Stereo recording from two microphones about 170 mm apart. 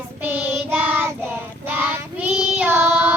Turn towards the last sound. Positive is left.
turn(degrees=-10)  # may be behind; listen again after turning